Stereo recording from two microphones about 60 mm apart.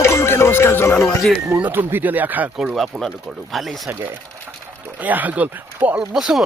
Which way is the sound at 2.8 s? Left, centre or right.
Centre.